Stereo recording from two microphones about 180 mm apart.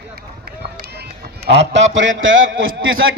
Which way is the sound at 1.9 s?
90° right.